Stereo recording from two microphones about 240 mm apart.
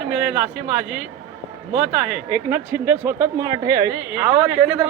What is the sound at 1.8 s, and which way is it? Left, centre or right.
Speech, centre.